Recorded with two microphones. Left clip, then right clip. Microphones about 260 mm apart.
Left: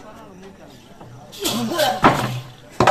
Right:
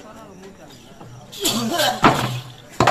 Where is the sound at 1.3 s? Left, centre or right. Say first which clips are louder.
Even; centre.